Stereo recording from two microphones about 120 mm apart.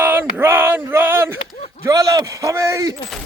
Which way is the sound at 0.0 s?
15° right (ahead or behind).